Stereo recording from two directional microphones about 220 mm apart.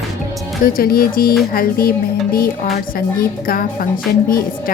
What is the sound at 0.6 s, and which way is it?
A woman's voice, 40° left (ahead or behind).